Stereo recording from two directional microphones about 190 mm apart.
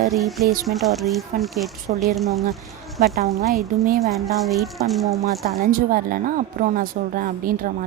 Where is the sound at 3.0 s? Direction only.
45° right (ahead or behind).